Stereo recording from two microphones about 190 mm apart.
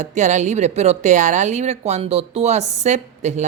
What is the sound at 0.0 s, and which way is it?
A woman's voice, 40° right (ahead or behind).